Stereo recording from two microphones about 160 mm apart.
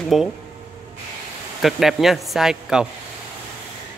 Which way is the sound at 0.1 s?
Centre (ahead or behind).